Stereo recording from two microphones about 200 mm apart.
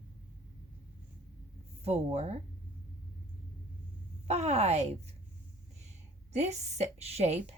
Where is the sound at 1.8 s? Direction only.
30° right (ahead or behind).